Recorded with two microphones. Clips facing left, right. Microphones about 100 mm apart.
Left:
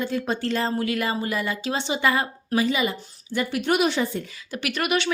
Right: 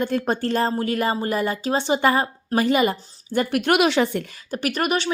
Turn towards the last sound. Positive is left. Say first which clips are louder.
# right 2 dB
turn(degrees=-40)  # may be behind; listen again after turning